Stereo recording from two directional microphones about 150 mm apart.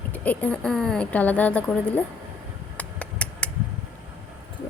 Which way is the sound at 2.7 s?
10° left (ahead or behind).